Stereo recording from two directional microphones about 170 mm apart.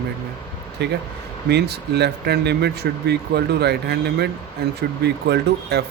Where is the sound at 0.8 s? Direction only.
80° right.